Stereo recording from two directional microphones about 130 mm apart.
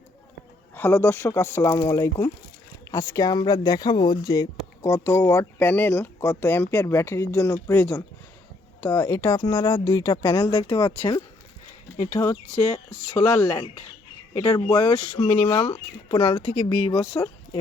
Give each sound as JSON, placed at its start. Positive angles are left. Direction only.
{"t": 0.7, "sound": "speech", "side_deg": 15}
{"t": 12.1, "sound": "speech", "side_deg": 15}
{"t": 14.3, "sound": "speech", "side_deg": 30}
{"t": 15.3, "sound": "speech", "side_deg": 15}
{"t": 15.5, "sound": "speech", "side_deg": 40}